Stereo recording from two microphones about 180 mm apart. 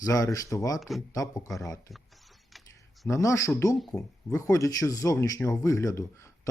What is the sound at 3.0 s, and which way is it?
Speech, 15° left (ahead or behind).